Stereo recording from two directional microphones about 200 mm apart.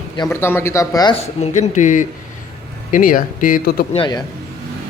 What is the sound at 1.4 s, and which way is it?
Speech, 35° left (ahead or behind).